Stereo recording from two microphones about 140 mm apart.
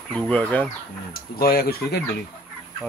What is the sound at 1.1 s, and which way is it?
Speech, 90° left.